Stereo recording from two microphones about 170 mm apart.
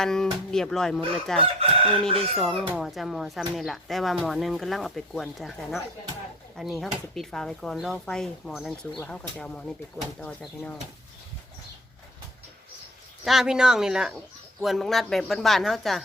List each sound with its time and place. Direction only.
0.0 s speech: 5° left (ahead or behind)
2.0 s chicken: 35° right (ahead or behind)
2.4 s speech: centre (ahead or behind)
13.2 s speech: 5° right (ahead or behind)